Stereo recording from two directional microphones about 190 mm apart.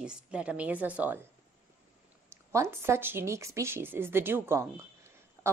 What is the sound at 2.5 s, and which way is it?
Speech, 15° right (ahead or behind).